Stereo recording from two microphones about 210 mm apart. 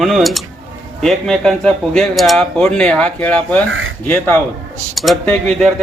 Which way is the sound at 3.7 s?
70° right (ahead or behind).